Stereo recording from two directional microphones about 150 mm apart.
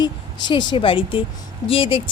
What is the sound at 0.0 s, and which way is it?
A woman's voice, 30° left (ahead or behind).